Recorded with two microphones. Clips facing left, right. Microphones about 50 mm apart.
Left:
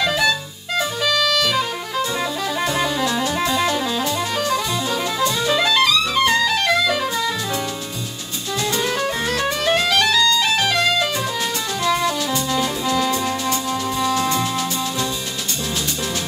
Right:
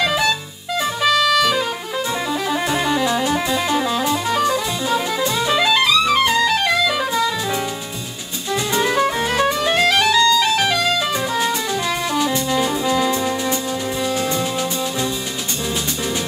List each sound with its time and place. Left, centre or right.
0.0 s music: centre
3.1 s music: centre
8.7 s music: centre
11.8 s music: centre